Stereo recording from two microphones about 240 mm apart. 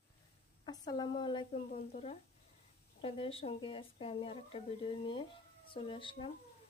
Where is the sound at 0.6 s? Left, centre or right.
Centre.